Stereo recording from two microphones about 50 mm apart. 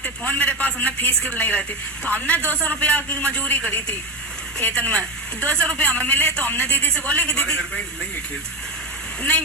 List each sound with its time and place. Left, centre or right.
0.0 s a man's voice: left
7.4 s a man's voice: centre